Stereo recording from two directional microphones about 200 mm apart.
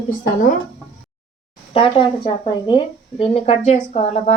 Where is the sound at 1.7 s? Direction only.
25° left (ahead or behind).